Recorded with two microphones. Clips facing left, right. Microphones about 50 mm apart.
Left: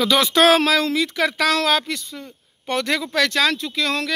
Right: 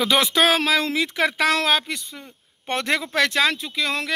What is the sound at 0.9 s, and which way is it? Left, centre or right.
Speech, right.